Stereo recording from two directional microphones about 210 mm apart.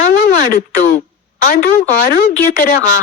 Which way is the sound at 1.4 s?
45° left (ahead or behind).